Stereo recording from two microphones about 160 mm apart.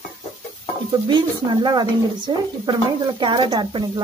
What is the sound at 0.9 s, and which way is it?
Speech, 25° right (ahead or behind).